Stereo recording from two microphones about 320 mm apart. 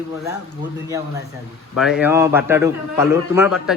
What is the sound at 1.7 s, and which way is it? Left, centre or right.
A man's voice, centre.